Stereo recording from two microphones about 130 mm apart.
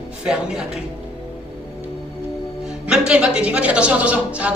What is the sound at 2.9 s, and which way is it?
A man's voice, 5° right (ahead or behind).